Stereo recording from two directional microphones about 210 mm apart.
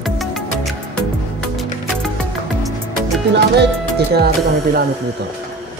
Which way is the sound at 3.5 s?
50° right (ahead or behind).